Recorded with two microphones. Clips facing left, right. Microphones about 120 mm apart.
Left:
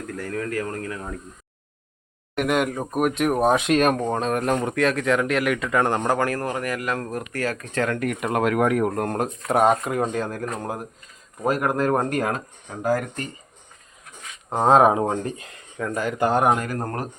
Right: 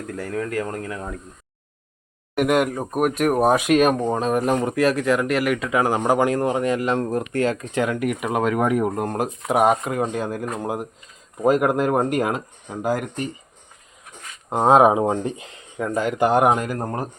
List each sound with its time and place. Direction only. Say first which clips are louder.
0.2 s speech: right 2 dB; 20° right (ahead or behind)
2.3 s speech: right 3 dB; 5° right (ahead or behind)
14.5 s speech: right 2 dB; 10° right (ahead or behind)